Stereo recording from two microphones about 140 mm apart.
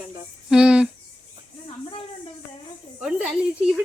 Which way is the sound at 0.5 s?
5° right (ahead or behind).